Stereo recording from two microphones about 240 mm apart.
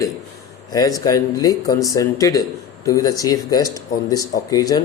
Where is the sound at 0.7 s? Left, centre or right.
Centre.